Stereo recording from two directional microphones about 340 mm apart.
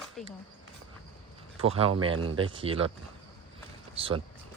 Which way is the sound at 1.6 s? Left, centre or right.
Centre.